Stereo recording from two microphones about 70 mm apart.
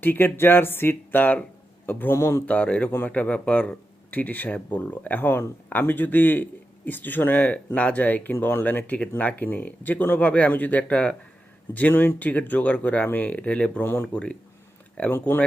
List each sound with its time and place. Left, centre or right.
0.0 s a man's voice: left
2.1 s speech: left
2.5 s a man's voice: centre
13.8 s a man's voice: left
14.1 s a man's voice: centre